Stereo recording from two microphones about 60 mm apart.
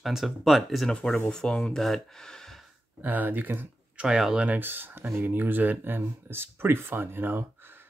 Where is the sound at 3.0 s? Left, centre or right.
Right.